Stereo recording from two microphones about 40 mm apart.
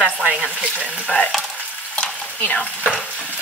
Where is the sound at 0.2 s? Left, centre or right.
Right.